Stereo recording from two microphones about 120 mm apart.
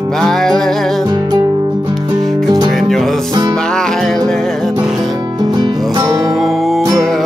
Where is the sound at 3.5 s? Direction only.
5° left (ahead or behind).